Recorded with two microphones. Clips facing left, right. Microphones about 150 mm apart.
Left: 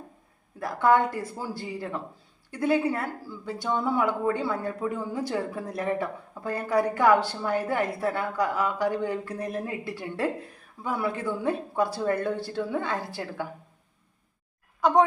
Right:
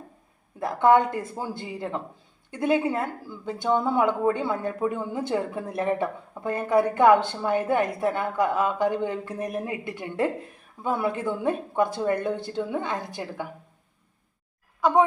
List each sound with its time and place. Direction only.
0.6 s speech: 20° right (ahead or behind)
14.8 s speech: centre (ahead or behind)